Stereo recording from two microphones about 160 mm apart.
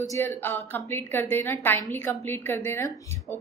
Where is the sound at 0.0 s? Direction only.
15° left (ahead or behind).